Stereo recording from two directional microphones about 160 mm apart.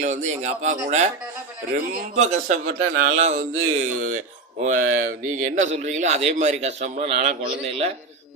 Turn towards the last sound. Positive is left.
turn(degrees=-40)  # may be behind; listen again after turning